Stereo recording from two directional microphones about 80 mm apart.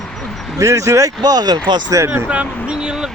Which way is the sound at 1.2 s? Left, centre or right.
Right.